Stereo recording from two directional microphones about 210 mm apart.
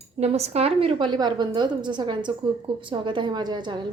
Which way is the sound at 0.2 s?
30° right (ahead or behind).